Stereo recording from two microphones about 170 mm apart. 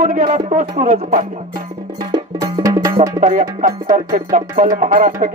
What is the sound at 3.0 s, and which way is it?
Speech, 50° right (ahead or behind).